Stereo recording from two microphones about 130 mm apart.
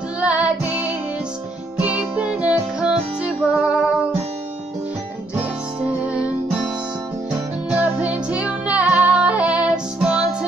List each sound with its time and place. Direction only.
0.2 s music: 10° right (ahead or behind)
1.8 s music: 10° right (ahead or behind)
5.3 s music: 10° right (ahead or behind)
7.7 s music: 10° right (ahead or behind)